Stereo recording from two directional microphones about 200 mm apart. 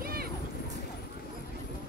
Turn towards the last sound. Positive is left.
turn(degrees=-45)  # may be behind; listen again after turning